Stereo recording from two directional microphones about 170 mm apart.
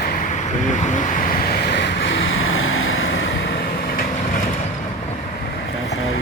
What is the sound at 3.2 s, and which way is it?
Vehicle, 90° left.